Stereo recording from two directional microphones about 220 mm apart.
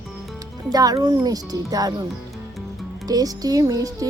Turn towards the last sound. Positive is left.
turn(degrees=-15)  # may be behind; listen again after turning